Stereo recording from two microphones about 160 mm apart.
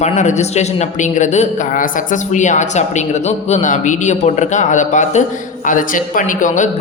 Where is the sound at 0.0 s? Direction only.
45° left (ahead or behind).